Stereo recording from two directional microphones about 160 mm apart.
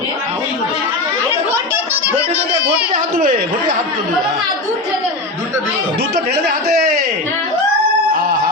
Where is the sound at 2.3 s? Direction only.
5° right (ahead or behind).